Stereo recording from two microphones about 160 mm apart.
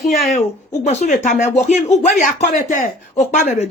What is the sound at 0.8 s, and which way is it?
Speech, 45° left (ahead or behind).